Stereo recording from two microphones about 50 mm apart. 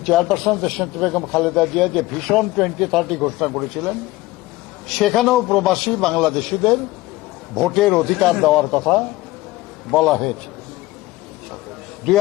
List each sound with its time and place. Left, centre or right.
0.0 s a man's voice: centre
4.9 s a man's voice: centre